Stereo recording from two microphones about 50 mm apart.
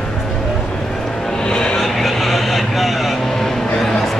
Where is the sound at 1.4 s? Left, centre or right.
Centre.